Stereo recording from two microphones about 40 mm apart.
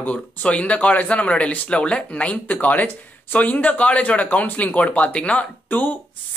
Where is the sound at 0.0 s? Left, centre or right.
Left.